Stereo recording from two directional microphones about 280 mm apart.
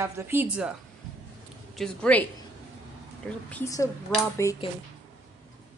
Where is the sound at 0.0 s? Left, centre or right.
Centre.